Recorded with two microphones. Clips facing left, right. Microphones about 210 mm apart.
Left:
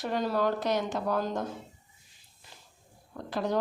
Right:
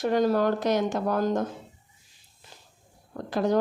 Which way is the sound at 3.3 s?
45° right (ahead or behind).